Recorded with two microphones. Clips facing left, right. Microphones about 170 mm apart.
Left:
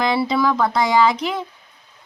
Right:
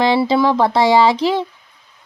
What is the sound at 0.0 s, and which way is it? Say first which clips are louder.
Speech: right 4 dB; 30° right (ahead or behind).